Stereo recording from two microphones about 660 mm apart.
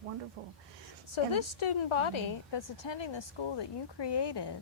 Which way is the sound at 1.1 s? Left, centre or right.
Left.